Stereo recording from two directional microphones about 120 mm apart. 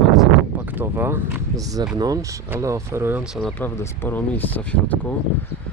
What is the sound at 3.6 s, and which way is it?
Speech, 15° left (ahead or behind).